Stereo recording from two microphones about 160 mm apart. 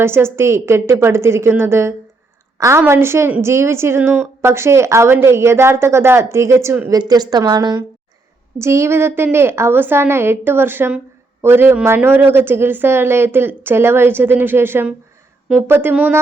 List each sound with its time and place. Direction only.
0.0 s a woman's voice: 15° right (ahead or behind)
8.5 s a woman's voice: 15° right (ahead or behind)